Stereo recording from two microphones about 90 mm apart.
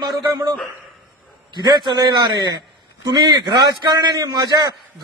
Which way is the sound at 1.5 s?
55° right (ahead or behind).